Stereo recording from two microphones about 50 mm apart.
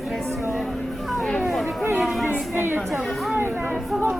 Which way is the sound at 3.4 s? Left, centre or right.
Right.